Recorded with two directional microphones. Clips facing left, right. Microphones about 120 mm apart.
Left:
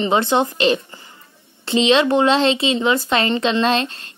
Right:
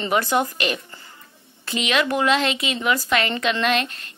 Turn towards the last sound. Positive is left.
turn(degrees=30)  # may be behind; listen again after turning